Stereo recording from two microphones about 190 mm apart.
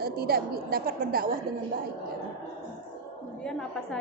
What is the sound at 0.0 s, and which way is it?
A woman's voice, 55° right (ahead or behind).